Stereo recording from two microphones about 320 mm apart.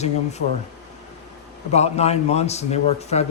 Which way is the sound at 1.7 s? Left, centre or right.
Centre.